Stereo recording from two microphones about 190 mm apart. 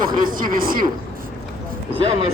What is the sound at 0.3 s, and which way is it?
Speech, 45° right (ahead or behind).